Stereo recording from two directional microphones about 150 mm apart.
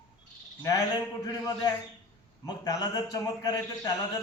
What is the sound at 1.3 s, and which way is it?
A man's voice, 25° left (ahead or behind).